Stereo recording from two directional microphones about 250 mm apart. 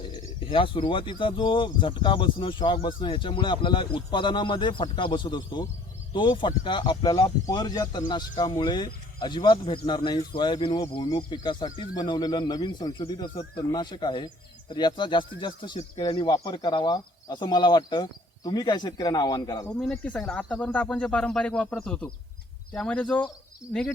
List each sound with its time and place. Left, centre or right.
0.3 s speech: left
19.8 s speech: centre